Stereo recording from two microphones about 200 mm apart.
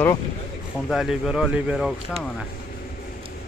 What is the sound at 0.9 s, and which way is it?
Speech, centre (ahead or behind).